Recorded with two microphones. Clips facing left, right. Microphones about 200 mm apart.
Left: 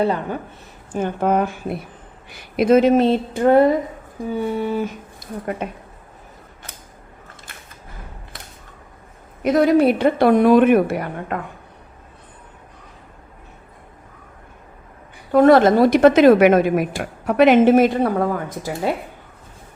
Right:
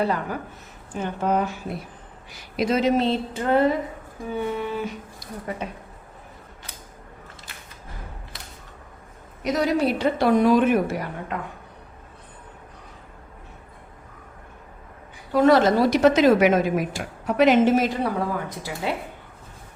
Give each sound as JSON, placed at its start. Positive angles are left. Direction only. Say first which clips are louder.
{"t": 0.0, "sound": "speech", "louder": "left 4 dB", "side_deg": 25}
{"t": 0.9, "sound": "a woman's voice", "louder": "left 5 dB", "side_deg": 50}
{"t": 4.3, "sound": "speech", "louder": "left 5 dB", "side_deg": 35}
{"t": 5.6, "sound": "a woman's voice", "louder": "left 4 dB", "side_deg": 55}
{"t": 9.4, "sound": "a woman's voice", "louder": "left 7 dB", "side_deg": 55}
{"t": 15.3, "sound": "a woman's voice", "louder": "left 5 dB", "side_deg": 55}
{"t": 18.8, "sound": "speech", "louder": "left 5 dB", "side_deg": 40}